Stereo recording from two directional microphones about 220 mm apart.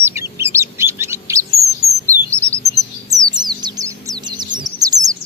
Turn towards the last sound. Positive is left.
turn(degrees=-15)  # may be behind; listen again after turning